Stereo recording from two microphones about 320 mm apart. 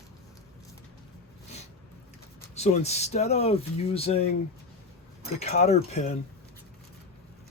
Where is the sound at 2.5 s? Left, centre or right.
Centre.